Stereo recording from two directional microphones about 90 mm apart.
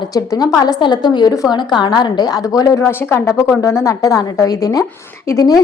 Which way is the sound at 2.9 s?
25° left (ahead or behind).